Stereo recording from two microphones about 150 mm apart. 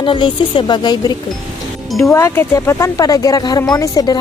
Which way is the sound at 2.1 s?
15° left (ahead or behind).